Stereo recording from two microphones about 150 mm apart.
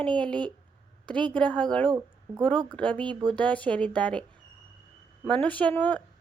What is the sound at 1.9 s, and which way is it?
Speech, 20° right (ahead or behind).